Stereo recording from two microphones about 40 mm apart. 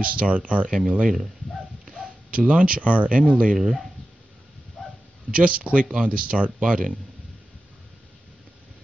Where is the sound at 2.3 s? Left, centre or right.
Right.